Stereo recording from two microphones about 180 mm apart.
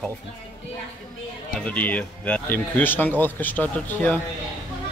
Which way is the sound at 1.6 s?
10° left (ahead or behind).